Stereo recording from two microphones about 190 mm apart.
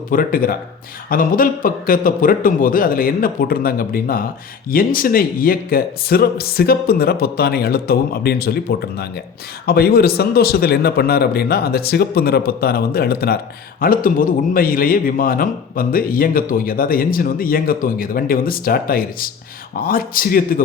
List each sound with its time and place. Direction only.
0.1 s a man's voice: 50° left (ahead or behind)